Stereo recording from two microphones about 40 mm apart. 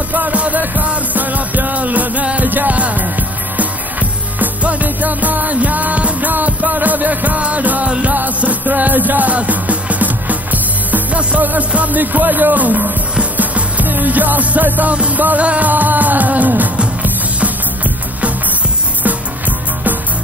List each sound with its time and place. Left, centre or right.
0.1 s music: right
4.4 s music: right
8.4 s music: right
11.7 s speech: right
13.2 s music: right
15.1 s speech: right
15.4 s music: right
15.7 s speech: right
19.0 s music: right